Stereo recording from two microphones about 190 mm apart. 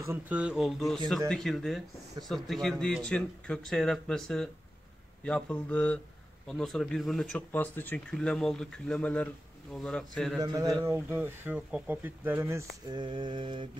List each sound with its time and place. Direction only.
0.0 s speech: 10° right (ahead or behind)
10.4 s speech: 20° right (ahead or behind)